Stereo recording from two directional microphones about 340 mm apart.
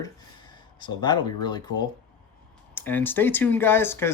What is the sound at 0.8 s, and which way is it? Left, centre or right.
Speech, centre.